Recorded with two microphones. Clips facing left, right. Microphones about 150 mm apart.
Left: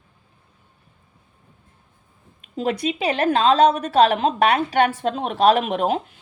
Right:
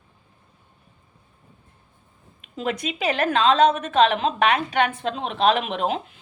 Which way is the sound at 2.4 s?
35° left (ahead or behind).